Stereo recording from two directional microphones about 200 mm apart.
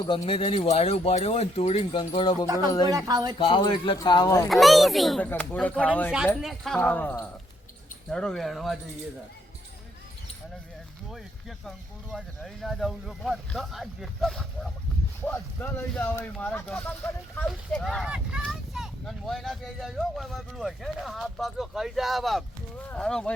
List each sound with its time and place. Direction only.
0.0 s speech: 25° left (ahead or behind)
2.8 s speech: 20° right (ahead or behind)
3.3 s speech: 25° left (ahead or behind)
4.4 s speech: centre (ahead or behind)
11.1 s speech: centre (ahead or behind)